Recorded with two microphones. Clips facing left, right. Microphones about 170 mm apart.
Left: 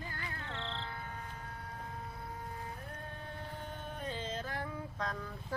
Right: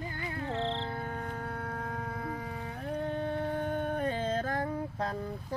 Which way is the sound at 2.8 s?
75° right (ahead or behind).